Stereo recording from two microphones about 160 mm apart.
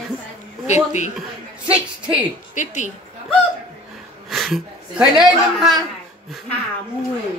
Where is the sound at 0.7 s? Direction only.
45° left (ahead or behind).